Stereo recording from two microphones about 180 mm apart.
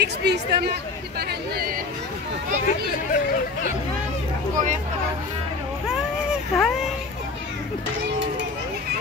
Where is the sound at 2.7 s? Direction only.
50° left (ahead or behind).